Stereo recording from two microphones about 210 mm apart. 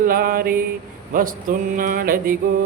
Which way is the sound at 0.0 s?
45° right (ahead or behind).